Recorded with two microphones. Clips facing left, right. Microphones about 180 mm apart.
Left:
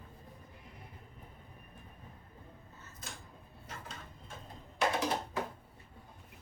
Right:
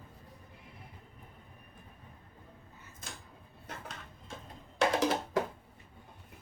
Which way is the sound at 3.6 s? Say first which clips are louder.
Right 2 dB; 70° right (ahead or behind).